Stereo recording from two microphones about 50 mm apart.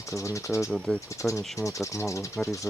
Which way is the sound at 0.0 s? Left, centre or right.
Left.